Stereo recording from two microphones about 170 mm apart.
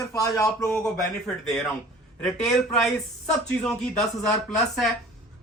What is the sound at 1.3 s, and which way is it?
Speech, 5° left (ahead or behind).